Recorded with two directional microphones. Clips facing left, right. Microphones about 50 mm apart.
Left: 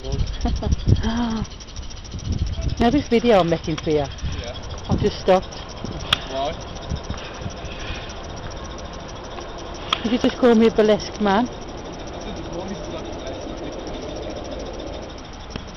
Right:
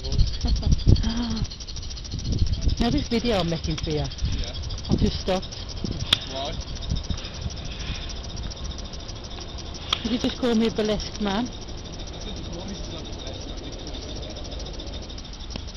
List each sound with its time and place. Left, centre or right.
0.0 s speech: left
2.8 s speech: left
3.9 s vehicle: left
6.0 s a sound: left
9.8 s speech: left
12.3 s vehicle: left